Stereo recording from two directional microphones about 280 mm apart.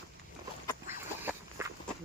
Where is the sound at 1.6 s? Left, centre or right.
Centre.